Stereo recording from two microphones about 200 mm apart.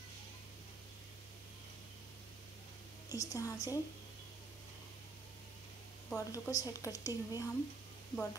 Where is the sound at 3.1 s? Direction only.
15° left (ahead or behind).